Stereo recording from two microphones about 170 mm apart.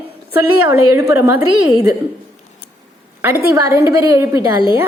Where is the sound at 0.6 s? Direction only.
15° right (ahead or behind).